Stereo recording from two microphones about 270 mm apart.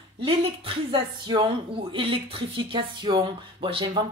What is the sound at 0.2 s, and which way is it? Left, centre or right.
Speech, centre.